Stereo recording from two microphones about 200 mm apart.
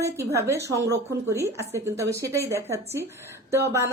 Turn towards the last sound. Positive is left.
turn(degrees=-15)  # may be behind; listen again after turning